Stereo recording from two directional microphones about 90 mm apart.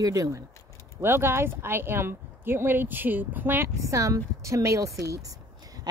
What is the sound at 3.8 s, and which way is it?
Speech, 35° right (ahead or behind).